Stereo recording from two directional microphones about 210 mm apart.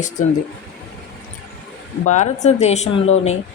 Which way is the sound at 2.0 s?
35° left (ahead or behind).